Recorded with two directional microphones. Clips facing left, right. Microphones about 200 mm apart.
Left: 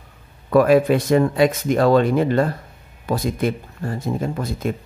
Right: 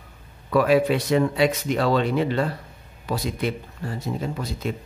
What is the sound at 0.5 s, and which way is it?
Speech, 50° left (ahead or behind).